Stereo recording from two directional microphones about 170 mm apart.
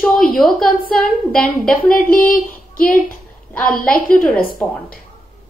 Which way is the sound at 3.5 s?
5° left (ahead or behind).